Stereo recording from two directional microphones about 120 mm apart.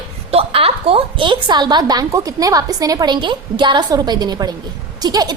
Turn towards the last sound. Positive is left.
turn(degrees=-35)  # may be behind; listen again after turning